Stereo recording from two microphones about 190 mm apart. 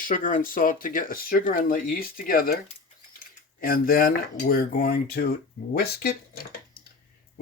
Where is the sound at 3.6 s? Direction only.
50° left (ahead or behind).